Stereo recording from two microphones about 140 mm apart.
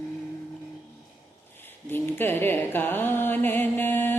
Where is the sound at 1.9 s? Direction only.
15° left (ahead or behind).